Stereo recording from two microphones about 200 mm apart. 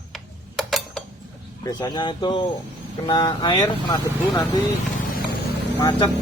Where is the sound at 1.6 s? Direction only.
20° left (ahead or behind).